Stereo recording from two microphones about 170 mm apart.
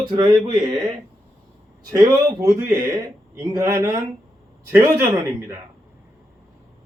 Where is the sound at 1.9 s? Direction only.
25° right (ahead or behind).